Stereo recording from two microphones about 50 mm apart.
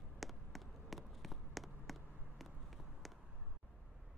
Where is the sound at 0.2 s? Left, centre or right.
Centre.